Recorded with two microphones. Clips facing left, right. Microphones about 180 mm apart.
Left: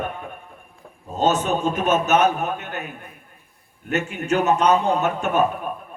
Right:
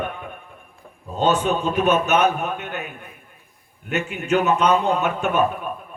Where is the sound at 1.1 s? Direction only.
45° left (ahead or behind).